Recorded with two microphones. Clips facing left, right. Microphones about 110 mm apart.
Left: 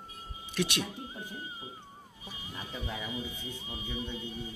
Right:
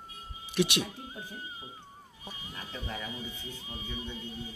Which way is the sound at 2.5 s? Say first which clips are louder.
Left 1 dB; 10° left (ahead or behind).